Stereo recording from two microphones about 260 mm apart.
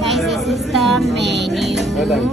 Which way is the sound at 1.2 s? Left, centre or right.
Right.